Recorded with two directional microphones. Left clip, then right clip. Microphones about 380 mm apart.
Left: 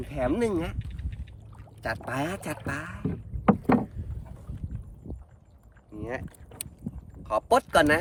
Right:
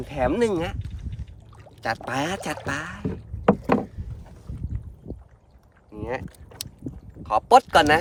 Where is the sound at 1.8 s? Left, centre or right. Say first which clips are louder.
Right 5 dB; centre.